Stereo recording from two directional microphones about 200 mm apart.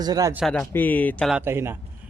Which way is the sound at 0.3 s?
Centre (ahead or behind).